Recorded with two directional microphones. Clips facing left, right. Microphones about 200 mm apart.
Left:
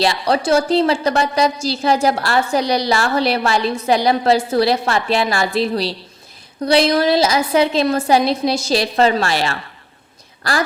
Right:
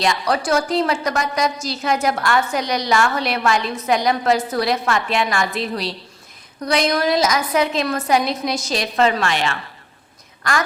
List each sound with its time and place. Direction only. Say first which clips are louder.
0.0 s a woman's voice: left 3 dB; 30° left (ahead or behind)